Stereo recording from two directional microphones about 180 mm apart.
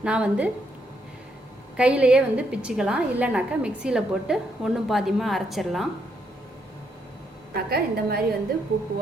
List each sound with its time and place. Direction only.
0.0 s a woman's voice: 5° right (ahead or behind)
1.7 s a woman's voice: 5° right (ahead or behind)
7.5 s a woman's voice: 60° right (ahead or behind)